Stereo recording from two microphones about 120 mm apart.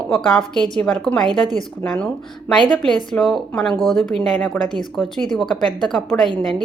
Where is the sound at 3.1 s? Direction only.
5° left (ahead or behind).